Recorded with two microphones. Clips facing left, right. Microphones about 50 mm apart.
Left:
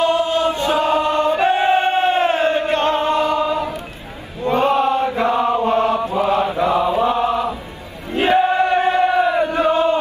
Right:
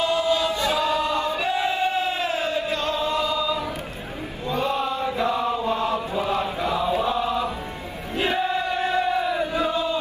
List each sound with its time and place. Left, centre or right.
0.0 s chant: left
6.6 s mantra: left
8.1 s chant: left